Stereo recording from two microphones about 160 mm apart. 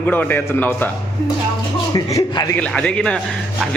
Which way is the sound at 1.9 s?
25° left (ahead or behind).